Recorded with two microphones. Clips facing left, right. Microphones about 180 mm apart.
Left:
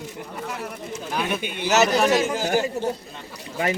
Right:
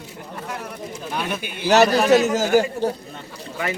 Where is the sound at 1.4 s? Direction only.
20° left (ahead or behind).